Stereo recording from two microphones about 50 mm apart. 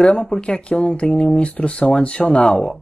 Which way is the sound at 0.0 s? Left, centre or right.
Centre.